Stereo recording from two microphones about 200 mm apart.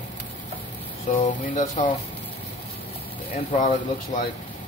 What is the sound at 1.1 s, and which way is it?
Speech, 40° left (ahead or behind).